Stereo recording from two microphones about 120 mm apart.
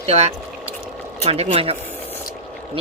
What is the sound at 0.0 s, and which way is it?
Speech, 60° right (ahead or behind).